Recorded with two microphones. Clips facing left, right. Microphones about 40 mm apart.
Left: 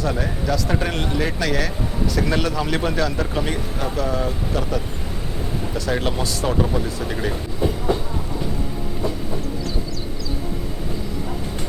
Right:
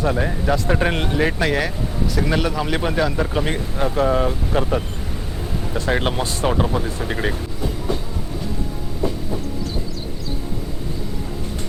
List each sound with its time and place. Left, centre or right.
0.1 s speech: centre
0.4 s speech: right
2.1 s speech: centre; by 7.3 s right